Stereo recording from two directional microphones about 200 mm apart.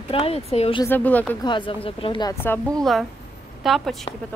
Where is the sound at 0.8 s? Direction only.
10° left (ahead or behind).